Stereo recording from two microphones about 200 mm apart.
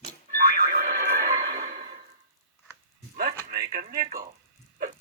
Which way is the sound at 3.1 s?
50° right (ahead or behind).